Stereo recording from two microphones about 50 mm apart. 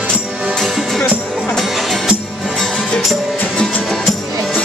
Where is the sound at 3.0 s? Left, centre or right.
Centre.